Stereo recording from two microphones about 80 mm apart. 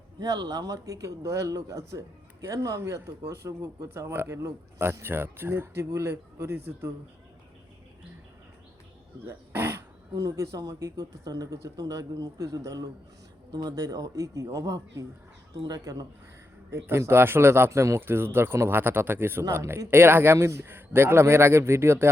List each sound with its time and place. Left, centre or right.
0.2 s speech: right
4.0 s speech: right
9.2 s speech: right
17.1 s speech: right